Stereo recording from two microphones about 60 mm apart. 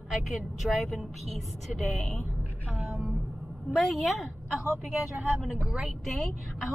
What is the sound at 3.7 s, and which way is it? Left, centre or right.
Speech, centre.